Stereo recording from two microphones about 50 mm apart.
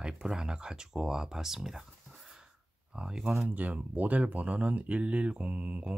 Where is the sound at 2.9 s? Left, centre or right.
Centre.